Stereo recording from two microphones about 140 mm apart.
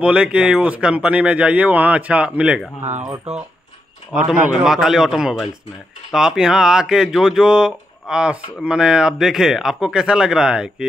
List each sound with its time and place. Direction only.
0.0 s speech: 10° right (ahead or behind)
2.8 s speech: 55° right (ahead or behind)
4.1 s speech: 5° right (ahead or behind)